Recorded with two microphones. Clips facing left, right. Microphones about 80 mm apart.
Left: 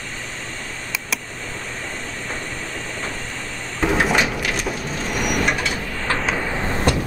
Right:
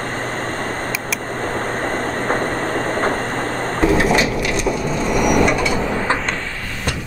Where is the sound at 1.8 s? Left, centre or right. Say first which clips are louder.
Right 10 dB; right.